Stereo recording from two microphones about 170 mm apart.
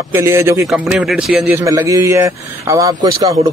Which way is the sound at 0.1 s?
15° right (ahead or behind).